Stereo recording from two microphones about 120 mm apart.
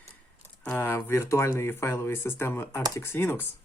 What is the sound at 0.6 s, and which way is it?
Speech, 15° left (ahead or behind).